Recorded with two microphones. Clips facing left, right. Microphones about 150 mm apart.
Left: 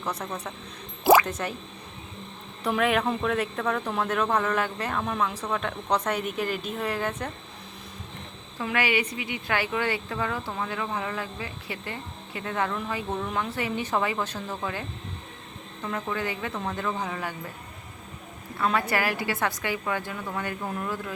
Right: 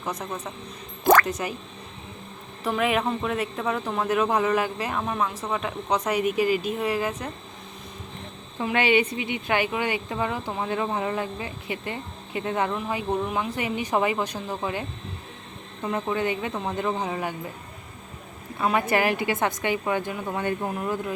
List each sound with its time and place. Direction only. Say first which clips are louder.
0.0 s speech: right 1 dB; 10° right (ahead or behind)
1.1 s a sound: even; 5° left (ahead or behind)
2.6 s speech: even; centre (ahead or behind)
8.5 s speech: right 5 dB; 25° right (ahead or behind)
18.5 s speech: right 3 dB; 20° right (ahead or behind)